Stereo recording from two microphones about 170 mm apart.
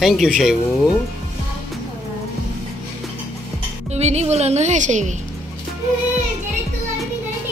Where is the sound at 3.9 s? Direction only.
40° right (ahead or behind).